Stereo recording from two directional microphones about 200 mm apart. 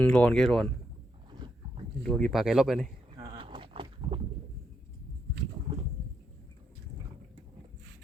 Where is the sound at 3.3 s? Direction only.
25° right (ahead or behind).